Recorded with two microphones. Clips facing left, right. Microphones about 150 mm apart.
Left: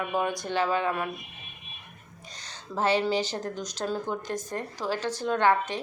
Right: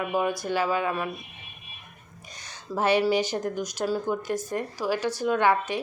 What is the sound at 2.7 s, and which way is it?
A woman's voice, 10° right (ahead or behind).